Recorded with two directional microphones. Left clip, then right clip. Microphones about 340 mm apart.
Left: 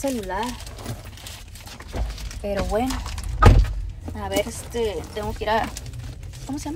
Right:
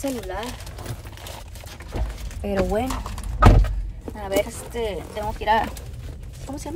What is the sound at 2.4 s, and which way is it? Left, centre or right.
Speech, centre.